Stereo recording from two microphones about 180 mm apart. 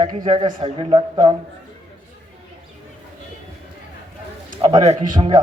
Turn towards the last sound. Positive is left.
turn(degrees=-25)  # may be behind; listen again after turning